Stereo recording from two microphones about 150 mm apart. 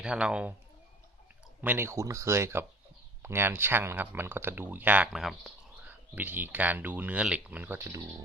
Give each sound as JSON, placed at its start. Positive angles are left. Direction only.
{"t": 0.0, "sound": "speech", "side_deg": -5}
{"t": 1.6, "sound": "speech", "side_deg": -15}
{"t": 5.9, "sound": "speech", "side_deg": -10}